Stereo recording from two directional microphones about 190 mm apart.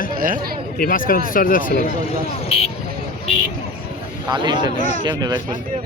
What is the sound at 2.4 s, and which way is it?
Speech, 30° left (ahead or behind).